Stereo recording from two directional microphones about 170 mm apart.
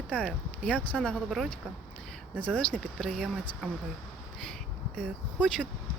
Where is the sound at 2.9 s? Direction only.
Centre (ahead or behind).